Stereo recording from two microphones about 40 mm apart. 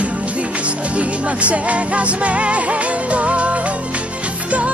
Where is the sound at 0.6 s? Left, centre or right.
Right.